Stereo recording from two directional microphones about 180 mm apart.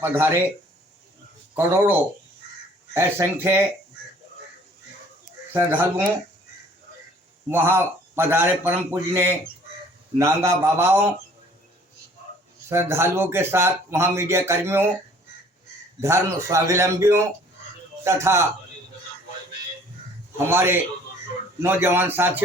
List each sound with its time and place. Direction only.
0.0 s a man's voice: 10° right (ahead or behind)
1.5 s a man's voice: 15° right (ahead or behind)
5.5 s a man's voice: 10° right (ahead or behind)
7.5 s a man's voice: 15° right (ahead or behind)
12.6 s a man's voice: 15° right (ahead or behind)
16.0 s a man's voice: 15° right (ahead or behind)
20.5 s a man's voice: 10° right (ahead or behind)